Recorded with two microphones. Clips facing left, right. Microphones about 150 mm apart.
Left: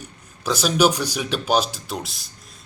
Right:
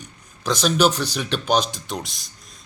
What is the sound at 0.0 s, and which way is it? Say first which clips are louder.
Speech: even; 5° left (ahead or behind).